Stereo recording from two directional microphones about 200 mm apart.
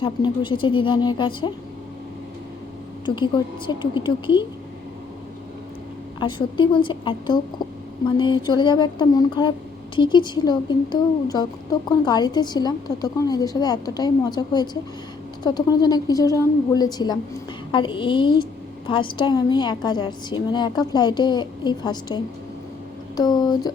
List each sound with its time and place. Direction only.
0.0 s a woman's voice: 25° left (ahead or behind)
3.2 s a woman's voice: 20° left (ahead or behind)
6.1 s a woman's voice: 25° left (ahead or behind)
8.4 s a woman's voice: 20° left (ahead or behind)